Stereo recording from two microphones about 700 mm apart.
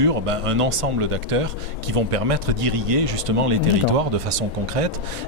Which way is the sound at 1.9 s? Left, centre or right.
Right.